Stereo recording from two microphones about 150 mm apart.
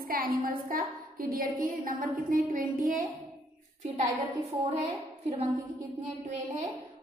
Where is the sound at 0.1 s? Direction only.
75° right (ahead or behind).